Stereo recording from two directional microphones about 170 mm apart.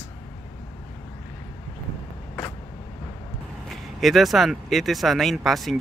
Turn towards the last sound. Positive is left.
turn(degrees=0)  # may be behind; listen again after turning